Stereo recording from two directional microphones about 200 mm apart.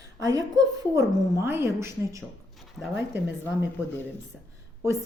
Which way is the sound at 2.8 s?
5° left (ahead or behind).